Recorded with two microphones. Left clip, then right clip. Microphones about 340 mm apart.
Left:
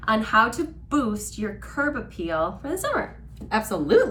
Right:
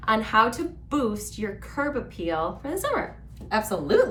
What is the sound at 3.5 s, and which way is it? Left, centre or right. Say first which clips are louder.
Speech: left 3 dB; centre.